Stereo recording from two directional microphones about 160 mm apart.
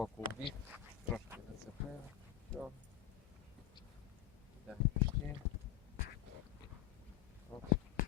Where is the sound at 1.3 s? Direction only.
15° right (ahead or behind).